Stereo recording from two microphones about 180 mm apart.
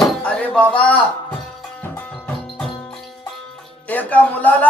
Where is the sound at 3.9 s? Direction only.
10° left (ahead or behind).